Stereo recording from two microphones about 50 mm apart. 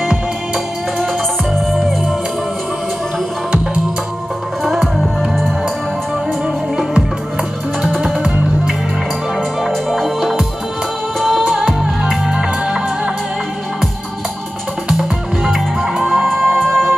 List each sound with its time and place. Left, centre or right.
1.7 s music: centre
4.6 s music: centre
9.8 s music: centre
11.5 s music: centre
14.9 s music: centre